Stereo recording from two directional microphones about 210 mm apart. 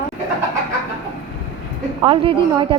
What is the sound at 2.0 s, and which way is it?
Speech, 25° right (ahead or behind).